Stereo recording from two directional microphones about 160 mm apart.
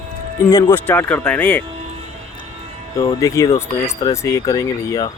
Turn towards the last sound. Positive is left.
turn(degrees=20)  # may be behind; listen again after turning